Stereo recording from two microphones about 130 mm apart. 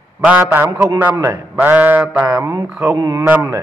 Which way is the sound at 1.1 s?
25° right (ahead or behind).